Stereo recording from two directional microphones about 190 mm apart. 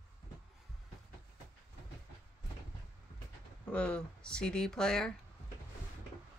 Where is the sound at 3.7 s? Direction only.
5° left (ahead or behind).